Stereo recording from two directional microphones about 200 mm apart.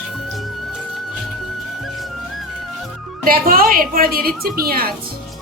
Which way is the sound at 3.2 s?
45° right (ahead or behind).